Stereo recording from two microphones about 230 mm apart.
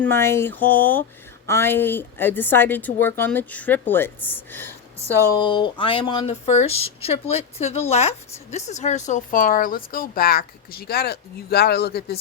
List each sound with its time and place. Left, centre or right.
0.0 s a woman's voice: centre; by 12.2 s left